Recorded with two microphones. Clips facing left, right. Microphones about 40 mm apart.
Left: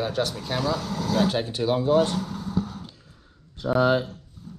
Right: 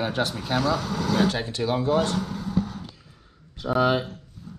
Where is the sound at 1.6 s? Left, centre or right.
Right.